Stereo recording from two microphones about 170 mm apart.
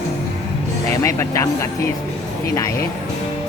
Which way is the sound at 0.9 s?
15° left (ahead or behind).